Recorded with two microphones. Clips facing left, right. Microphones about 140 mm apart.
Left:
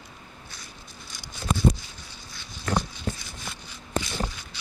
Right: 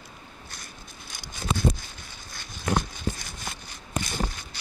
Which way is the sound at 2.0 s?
50° right (ahead or behind).